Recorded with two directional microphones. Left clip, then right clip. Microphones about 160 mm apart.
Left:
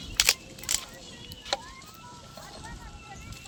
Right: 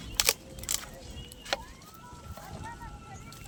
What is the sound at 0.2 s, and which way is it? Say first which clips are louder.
Single-lens reflex camera: left 4 dB; 90° right.